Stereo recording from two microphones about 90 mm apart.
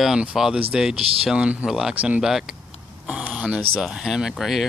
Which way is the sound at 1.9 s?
15° right (ahead or behind).